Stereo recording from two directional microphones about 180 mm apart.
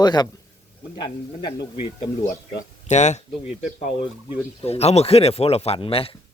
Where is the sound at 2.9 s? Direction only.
40° left (ahead or behind).